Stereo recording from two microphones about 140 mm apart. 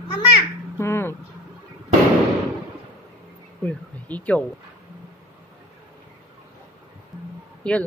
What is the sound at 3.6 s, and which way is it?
Speech, 10° left (ahead or behind).